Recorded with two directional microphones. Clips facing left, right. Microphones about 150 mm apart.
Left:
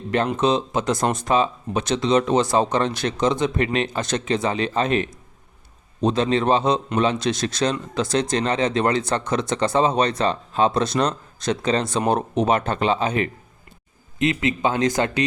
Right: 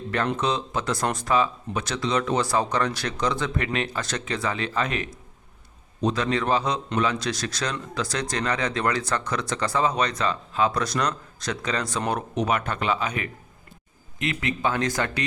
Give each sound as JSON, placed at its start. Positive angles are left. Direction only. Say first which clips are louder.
{"t": 0.3, "sound": "a man's voice", "louder": "left 6 dB", "side_deg": 20}